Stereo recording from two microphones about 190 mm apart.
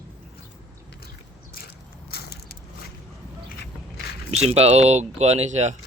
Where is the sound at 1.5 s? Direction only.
55° left (ahead or behind).